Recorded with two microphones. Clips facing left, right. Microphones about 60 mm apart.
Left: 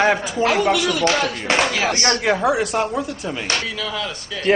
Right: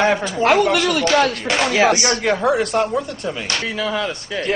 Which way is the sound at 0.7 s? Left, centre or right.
Right.